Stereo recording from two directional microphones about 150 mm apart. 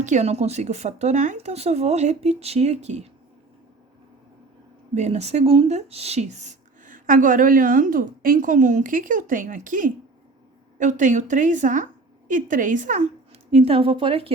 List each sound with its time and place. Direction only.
0.0 s speech: 50° right (ahead or behind)
4.9 s speech: 45° right (ahead or behind)
13.5 s a woman's voice: 40° right (ahead or behind)